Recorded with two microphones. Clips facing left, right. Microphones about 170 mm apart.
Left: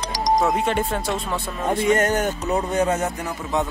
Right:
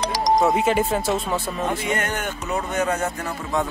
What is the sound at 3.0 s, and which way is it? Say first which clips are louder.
Speech: left 1 dB; 20° left (ahead or behind).